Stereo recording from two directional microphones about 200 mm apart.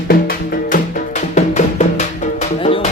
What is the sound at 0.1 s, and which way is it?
Music, 45° left (ahead or behind).